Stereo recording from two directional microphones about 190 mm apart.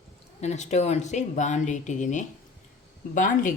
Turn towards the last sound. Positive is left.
turn(degrees=45)  # may be behind; listen again after turning